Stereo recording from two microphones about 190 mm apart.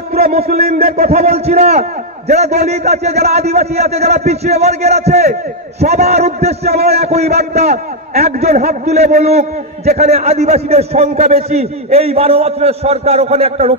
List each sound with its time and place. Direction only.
0.2 s a man's voice: 35° right (ahead or behind)
0.6 s a man's voice: 55° right (ahead or behind)
1.0 s a man's voice: 35° right (ahead or behind)